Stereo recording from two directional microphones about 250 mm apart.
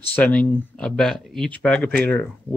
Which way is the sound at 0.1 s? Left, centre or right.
Centre.